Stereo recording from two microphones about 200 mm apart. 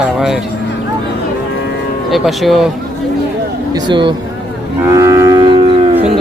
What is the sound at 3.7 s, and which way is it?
Speech, 20° right (ahead or behind).